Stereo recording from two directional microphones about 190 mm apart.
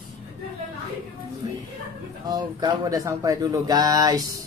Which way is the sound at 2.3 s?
20° right (ahead or behind).